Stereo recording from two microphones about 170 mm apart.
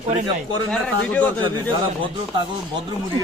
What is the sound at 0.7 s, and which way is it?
Speech, 10° left (ahead or behind).